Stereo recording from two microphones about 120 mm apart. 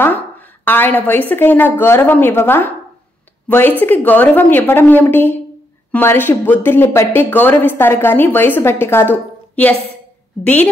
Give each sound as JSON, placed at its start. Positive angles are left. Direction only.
{"t": 0.7, "sound": "speech", "side_deg": 15}